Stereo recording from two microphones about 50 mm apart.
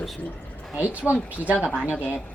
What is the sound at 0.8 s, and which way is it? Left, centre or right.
Speech, right.